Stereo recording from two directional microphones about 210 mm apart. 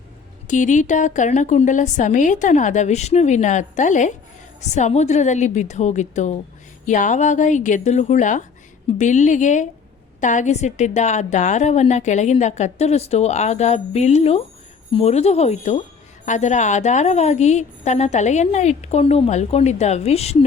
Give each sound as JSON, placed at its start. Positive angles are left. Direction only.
{"t": 0.4, "sound": "a woman's voice", "side_deg": 35}